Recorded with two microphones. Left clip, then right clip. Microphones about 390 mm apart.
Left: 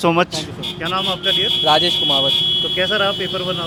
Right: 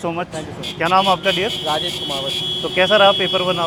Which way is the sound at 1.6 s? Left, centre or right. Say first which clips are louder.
Left 7 dB; left.